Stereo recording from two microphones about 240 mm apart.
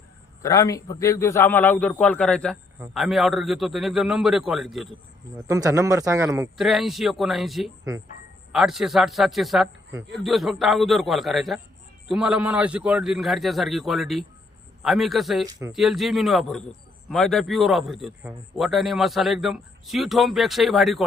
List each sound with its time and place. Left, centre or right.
0.4 s a man's voice: centre
5.5 s a man's voice: centre
6.6 s speech: centre